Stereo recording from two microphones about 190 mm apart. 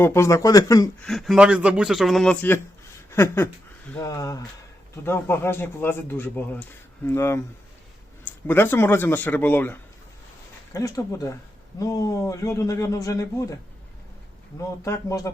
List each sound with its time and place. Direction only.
0.0 s speech: 15° left (ahead or behind)
1.0 s a man's voice: centre (ahead or behind)
3.1 s a sound: 15° left (ahead or behind)
3.9 s speech: 15° left (ahead or behind)
14.8 s speech: 15° left (ahead or behind)